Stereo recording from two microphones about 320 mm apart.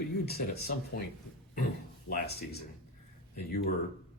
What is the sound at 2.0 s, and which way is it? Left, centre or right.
Speech, left.